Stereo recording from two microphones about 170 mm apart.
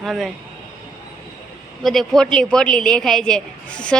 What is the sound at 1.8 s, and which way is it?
A woman's voice, centre (ahead or behind).